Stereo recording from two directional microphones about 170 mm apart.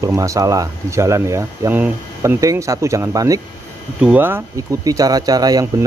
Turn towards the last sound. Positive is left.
turn(degrees=-20)  # may be behind; listen again after turning